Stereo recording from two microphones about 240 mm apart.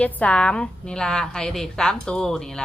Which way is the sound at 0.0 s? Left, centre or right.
Centre.